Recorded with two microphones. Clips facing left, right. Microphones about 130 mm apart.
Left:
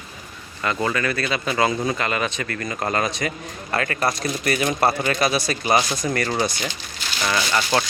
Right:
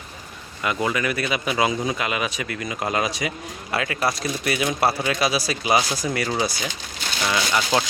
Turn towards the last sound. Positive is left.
turn(degrees=-10)  # may be behind; listen again after turning